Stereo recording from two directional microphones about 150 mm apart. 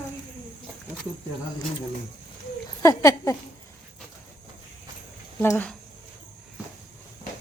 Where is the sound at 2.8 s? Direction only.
20° left (ahead or behind).